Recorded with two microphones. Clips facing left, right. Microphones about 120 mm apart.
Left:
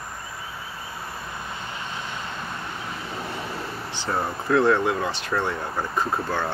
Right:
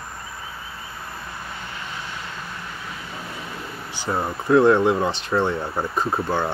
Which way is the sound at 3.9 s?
10° right (ahead or behind).